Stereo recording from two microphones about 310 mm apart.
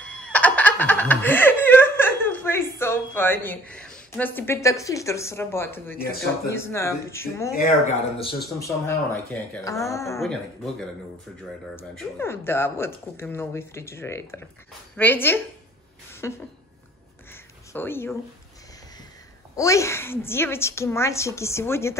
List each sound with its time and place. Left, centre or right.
0.0 s speech: centre
7.5 s speech: centre
8.4 s speech: centre
11.7 s speech: centre
16.1 s a sound: centre
17.7 s speech: centre
19.5 s speech: centre